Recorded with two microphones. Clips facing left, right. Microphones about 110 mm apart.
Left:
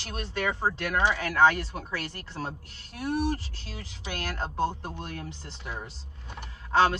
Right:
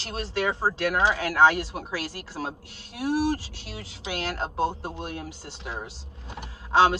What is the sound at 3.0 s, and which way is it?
Speech, 85° right.